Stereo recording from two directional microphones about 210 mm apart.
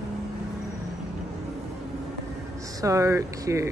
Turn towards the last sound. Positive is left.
turn(degrees=-15)  # may be behind; listen again after turning